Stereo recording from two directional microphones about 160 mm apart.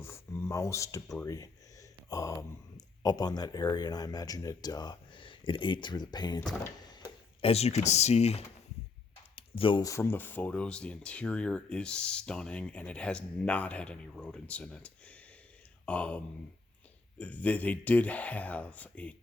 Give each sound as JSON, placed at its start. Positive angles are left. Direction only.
{"t": 0.0, "sound": "a sound", "side_deg": 15}
{"t": 1.2, "sound": "speech", "side_deg": 20}
{"t": 6.7, "sound": "tick-tock", "side_deg": 25}
{"t": 7.5, "sound": "speech", "side_deg": 40}
{"t": 9.3, "sound": "a sound", "side_deg": 35}
{"t": 9.8, "sound": "speech", "side_deg": 15}